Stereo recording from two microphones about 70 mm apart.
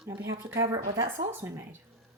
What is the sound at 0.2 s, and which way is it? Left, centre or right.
Speech, right.